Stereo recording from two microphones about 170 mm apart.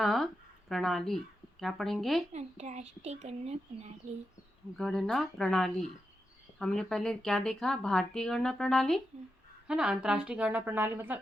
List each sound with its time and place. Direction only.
0.0 s speech: centre (ahead or behind)
2.3 s a child's voice: 40° right (ahead or behind)
4.8 s a woman's voice: 5° left (ahead or behind)